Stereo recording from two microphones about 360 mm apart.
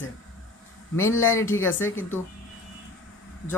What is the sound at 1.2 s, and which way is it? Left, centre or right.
Speech, centre.